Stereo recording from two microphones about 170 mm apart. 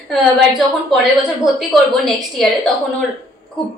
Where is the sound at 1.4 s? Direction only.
Centre (ahead or behind).